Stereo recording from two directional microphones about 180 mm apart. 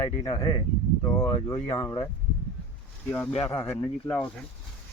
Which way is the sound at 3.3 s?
30° left (ahead or behind).